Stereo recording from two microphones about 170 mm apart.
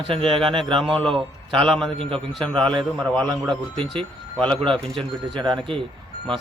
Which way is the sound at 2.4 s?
5° left (ahead or behind).